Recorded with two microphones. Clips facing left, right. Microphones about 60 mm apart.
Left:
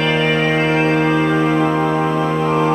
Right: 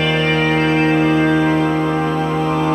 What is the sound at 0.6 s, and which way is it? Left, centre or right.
Music, centre.